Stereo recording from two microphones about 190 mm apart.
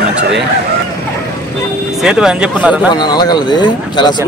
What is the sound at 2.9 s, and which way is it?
Speech, 20° left (ahead or behind).